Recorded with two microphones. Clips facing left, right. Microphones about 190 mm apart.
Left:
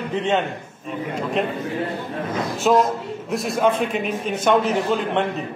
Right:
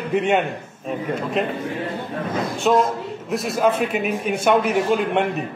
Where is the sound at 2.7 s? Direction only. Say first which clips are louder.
Left 1 dB; centre (ahead or behind).